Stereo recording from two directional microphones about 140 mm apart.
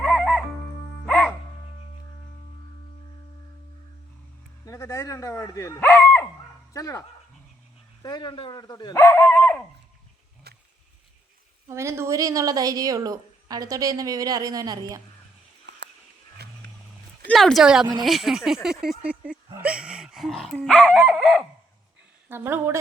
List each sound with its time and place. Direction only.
1.0 s music: 5° left (ahead or behind)
4.6 s speech: 20° left (ahead or behind)
8.0 s speech: 30° left (ahead or behind); by 9.6 s 10° left (ahead or behind)
11.7 s speech: 20° right (ahead or behind)
17.2 s speech: centre (ahead or behind)
22.3 s a woman's voice: 15° right (ahead or behind)